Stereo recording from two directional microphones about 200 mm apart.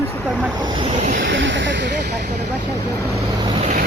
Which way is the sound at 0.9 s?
40° right (ahead or behind).